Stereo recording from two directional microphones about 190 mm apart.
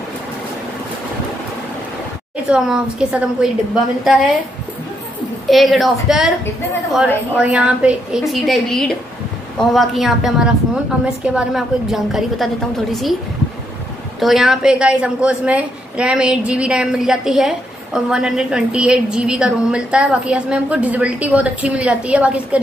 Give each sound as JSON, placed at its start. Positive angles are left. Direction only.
{"t": 2.4, "sound": "a woman's voice", "side_deg": -5}
{"t": 5.5, "sound": "a woman's voice", "side_deg": 0}
{"t": 7.3, "sound": "a woman's voice", "side_deg": -5}
{"t": 14.2, "sound": "a woman's voice", "side_deg": 0}